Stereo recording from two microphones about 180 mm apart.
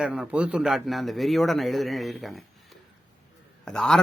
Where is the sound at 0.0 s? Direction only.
5° right (ahead or behind).